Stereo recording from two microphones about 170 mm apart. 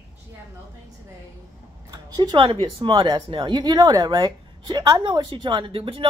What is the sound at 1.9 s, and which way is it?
A woman's voice, 25° right (ahead or behind).